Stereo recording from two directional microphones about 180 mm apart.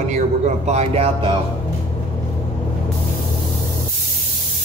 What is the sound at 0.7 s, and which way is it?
Speech, 35° right (ahead or behind).